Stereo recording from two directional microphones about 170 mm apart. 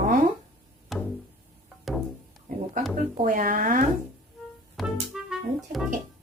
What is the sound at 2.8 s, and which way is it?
Speech, 50° right (ahead or behind).